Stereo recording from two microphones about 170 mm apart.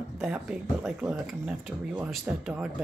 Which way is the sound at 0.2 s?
5° right (ahead or behind).